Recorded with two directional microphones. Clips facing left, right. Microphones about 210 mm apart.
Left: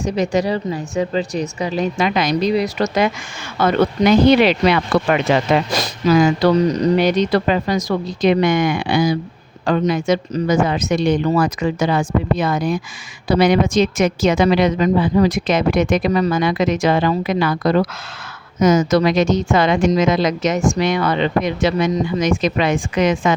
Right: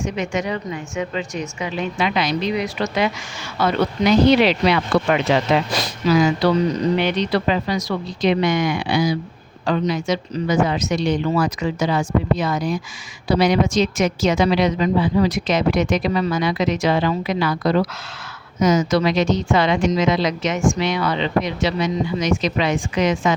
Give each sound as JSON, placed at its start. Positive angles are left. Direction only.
{"t": 0.0, "sound": "a woman's voice", "side_deg": 35}